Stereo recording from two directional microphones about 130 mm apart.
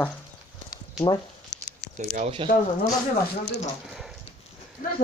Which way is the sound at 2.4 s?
40° right (ahead or behind).